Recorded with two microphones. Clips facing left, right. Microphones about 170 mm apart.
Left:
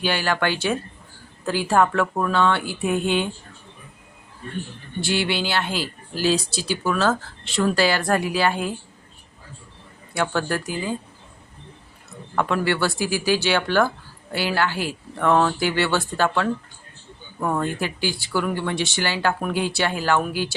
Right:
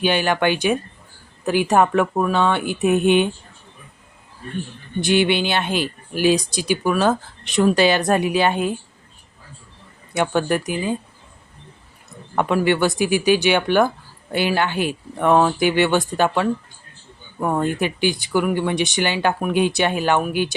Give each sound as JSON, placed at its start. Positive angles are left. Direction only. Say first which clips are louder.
{"t": 0.0, "sound": "speech", "louder": "right 4 dB", "side_deg": -20}
{"t": 4.9, "sound": "speech", "louder": "right 6 dB", "side_deg": -20}
{"t": 10.2, "sound": "speech", "louder": "right 4 dB", "side_deg": -20}
{"t": 12.4, "sound": "speech", "louder": "right 4 dB", "side_deg": -15}